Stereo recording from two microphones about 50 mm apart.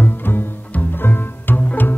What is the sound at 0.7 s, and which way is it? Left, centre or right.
Bowed string instrument, left.